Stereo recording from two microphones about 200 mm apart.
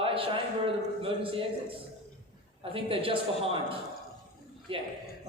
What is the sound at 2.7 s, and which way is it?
A man's voice, 25° right (ahead or behind).